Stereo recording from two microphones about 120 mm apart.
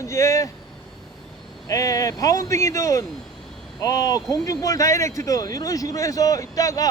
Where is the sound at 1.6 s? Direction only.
30° left (ahead or behind).